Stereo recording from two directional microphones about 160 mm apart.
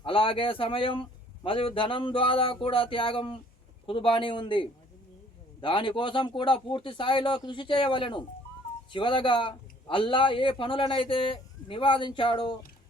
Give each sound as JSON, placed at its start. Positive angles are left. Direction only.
{"t": 0.0, "sound": "speech", "side_deg": 35}